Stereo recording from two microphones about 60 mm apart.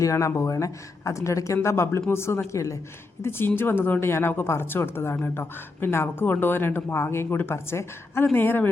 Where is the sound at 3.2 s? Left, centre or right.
Left.